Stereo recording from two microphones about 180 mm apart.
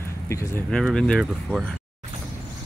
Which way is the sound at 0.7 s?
5° left (ahead or behind).